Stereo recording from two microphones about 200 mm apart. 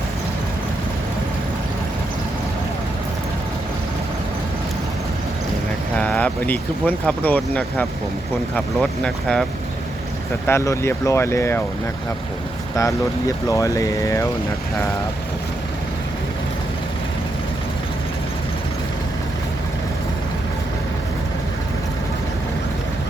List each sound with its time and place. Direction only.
6.0 s speech: 5° left (ahead or behind)
10.4 s speech: 15° left (ahead or behind)
12.7 s speech: 15° left (ahead or behind)